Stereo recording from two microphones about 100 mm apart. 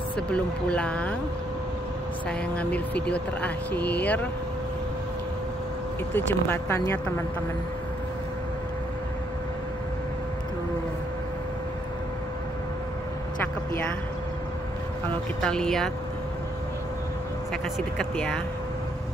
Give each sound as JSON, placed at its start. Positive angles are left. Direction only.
{"t": 0.3, "sound": "speech", "side_deg": 10}
{"t": 2.2, "sound": "speech", "side_deg": 15}
{"t": 6.1, "sound": "speech", "side_deg": 25}
{"t": 15.4, "sound": "speech", "side_deg": 5}
{"t": 17.9, "sound": "speech", "side_deg": 10}